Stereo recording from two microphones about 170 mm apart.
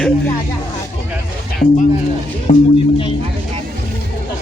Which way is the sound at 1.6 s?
45° left (ahead or behind).